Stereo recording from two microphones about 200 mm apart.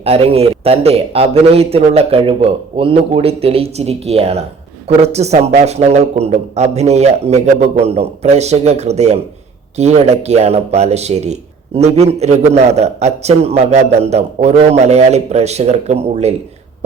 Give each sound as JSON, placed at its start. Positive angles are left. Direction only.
{"t": 0.0, "sound": "speech", "side_deg": -30}